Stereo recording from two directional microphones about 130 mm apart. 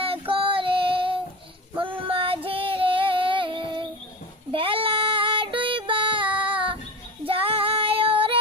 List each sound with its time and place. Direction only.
0.0 s child singing: 45° right (ahead or behind)
1.8 s female singing: 40° right (ahead or behind)
4.5 s child singing: 45° right (ahead or behind)
7.3 s female singing: 45° right (ahead or behind)